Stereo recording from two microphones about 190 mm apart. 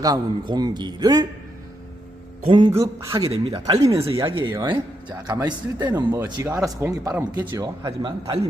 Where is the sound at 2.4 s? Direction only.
25° right (ahead or behind).